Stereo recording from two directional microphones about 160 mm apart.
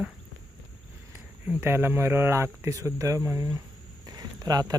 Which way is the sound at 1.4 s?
15° right (ahead or behind).